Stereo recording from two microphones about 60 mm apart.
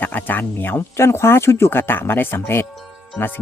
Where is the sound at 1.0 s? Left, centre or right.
Left.